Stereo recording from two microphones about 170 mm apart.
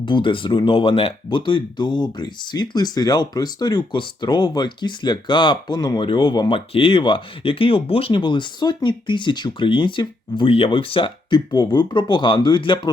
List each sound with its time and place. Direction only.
0.0 s speech: 30° left (ahead or behind)